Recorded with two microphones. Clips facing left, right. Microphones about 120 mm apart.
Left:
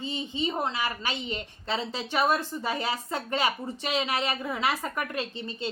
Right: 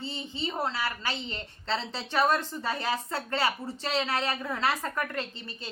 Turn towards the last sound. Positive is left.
turn(degrees=20)  # may be behind; listen again after turning